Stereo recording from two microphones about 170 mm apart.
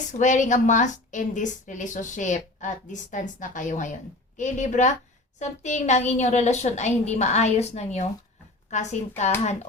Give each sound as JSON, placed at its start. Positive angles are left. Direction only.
{"t": 0.2, "sound": "a woman's voice", "side_deg": 45}